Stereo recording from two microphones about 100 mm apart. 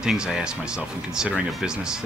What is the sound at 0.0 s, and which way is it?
Speech, 5° right (ahead or behind).